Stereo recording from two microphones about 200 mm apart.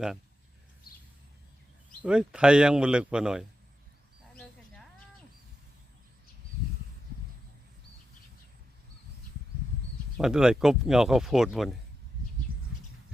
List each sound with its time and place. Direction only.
2.0 s speech: 5° right (ahead or behind)
10.2 s speech: 5° right (ahead or behind)
12.5 s bird: 45° right (ahead or behind)